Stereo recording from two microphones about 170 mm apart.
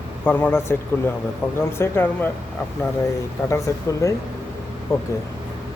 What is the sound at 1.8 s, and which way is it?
Speech, 10° left (ahead or behind).